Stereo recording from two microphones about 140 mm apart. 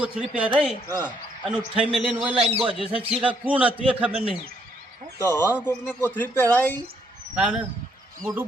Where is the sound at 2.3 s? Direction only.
45° right (ahead or behind).